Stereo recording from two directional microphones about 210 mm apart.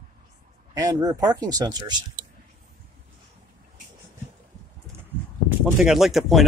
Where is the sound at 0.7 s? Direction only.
20° right (ahead or behind).